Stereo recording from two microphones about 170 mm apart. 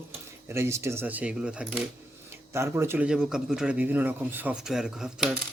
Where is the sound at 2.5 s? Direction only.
15° right (ahead or behind).